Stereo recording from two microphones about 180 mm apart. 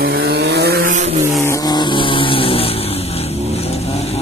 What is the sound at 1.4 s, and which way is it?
Vehicle, 20° left (ahead or behind).